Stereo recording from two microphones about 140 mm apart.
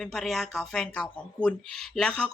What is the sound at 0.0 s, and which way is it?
Speech, centre (ahead or behind).